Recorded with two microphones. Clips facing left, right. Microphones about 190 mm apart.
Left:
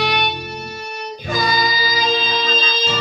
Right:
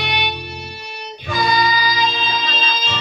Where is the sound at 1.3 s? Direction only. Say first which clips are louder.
Right 2 dB; 40° left (ahead or behind).